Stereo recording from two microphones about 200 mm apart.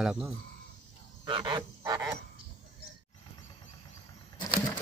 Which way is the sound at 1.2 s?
25° right (ahead or behind).